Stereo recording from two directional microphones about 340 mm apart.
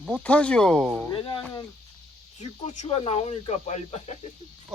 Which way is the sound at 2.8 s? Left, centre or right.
Centre.